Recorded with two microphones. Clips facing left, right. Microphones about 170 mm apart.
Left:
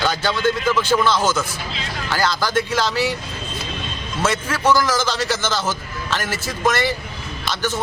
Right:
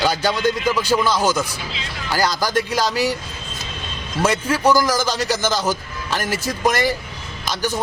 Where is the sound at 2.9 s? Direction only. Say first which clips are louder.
Right 1 dB; 40° right (ahead or behind).